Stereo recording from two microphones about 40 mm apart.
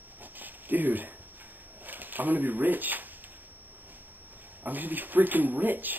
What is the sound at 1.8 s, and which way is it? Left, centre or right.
Speech, right.